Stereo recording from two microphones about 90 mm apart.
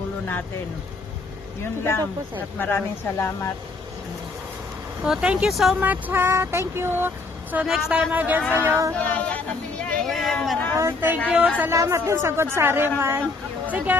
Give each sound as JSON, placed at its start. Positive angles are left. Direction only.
{"t": 1.6, "sound": "speech", "side_deg": 25}
{"t": 5.0, "sound": "a man's voice", "side_deg": -10}
{"t": 5.8, "sound": "speech", "side_deg": -20}
{"t": 7.6, "sound": "a man's voice", "side_deg": -5}
{"t": 7.9, "sound": "speech", "side_deg": -20}
{"t": 8.9, "sound": "speech", "side_deg": 15}
{"t": 9.8, "sound": "a sound", "side_deg": 5}
{"t": 10.8, "sound": "speech", "side_deg": -25}
{"t": 11.7, "sound": "speech", "side_deg": -35}